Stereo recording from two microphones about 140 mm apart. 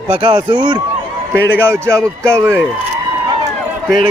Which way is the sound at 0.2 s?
35° right (ahead or behind).